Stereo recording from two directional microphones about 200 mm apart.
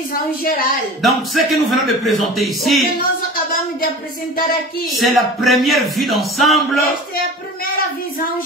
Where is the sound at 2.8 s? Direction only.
45° left (ahead or behind).